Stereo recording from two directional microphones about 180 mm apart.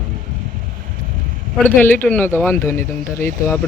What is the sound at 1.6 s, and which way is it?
Speech, 10° left (ahead or behind).